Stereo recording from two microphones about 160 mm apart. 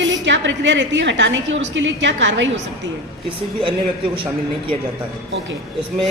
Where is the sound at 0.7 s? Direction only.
90° right.